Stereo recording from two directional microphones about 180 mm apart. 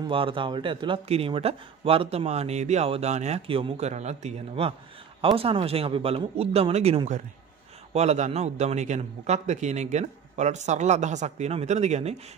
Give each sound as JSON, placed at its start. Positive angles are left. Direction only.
{"t": 0.1, "sound": "speech", "side_deg": -30}